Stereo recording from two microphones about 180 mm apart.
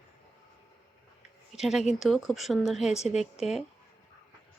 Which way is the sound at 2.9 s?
40° left (ahead or behind).